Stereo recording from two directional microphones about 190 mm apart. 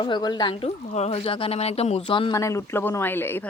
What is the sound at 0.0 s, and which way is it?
Speech, 25° left (ahead or behind).